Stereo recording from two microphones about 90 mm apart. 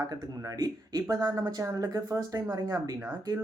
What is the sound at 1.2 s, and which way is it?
Speech, 45° right (ahead or behind).